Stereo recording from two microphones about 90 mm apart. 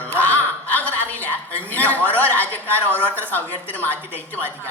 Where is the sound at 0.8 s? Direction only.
20° left (ahead or behind).